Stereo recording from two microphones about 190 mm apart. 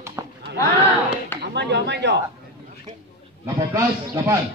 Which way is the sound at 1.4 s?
65° right (ahead or behind).